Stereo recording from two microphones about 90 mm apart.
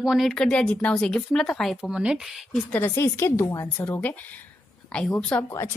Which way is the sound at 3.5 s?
40° left (ahead or behind).